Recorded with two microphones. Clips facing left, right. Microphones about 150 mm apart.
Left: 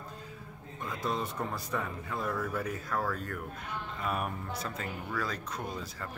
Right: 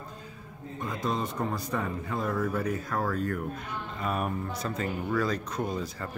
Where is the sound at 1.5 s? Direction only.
20° right (ahead or behind).